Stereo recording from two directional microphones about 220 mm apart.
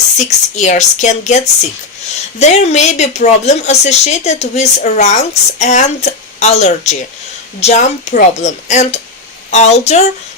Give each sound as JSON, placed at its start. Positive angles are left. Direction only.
{"t": 0.2, "sound": "a woman's voice", "side_deg": 30}